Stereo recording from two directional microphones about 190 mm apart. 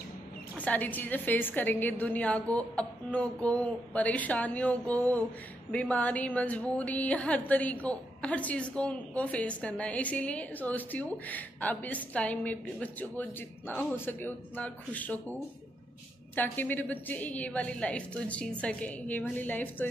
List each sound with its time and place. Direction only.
0.6 s speech: 10° left (ahead or behind)
16.3 s speech: 10° left (ahead or behind)